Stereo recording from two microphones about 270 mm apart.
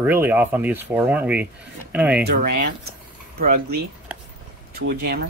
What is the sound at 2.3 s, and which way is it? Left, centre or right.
Speech, right.